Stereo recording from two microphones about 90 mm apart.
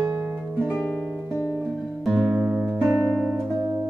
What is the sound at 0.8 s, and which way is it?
Music, 10° left (ahead or behind).